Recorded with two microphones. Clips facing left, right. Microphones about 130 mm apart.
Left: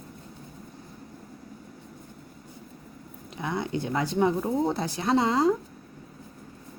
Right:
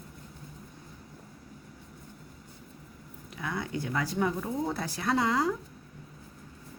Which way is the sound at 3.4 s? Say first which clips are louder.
Left 4 dB; 25° left (ahead or behind).